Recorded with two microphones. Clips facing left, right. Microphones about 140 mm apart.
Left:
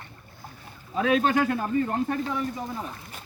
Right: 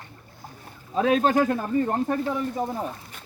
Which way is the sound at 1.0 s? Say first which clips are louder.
Right 2 dB; 40° right (ahead or behind).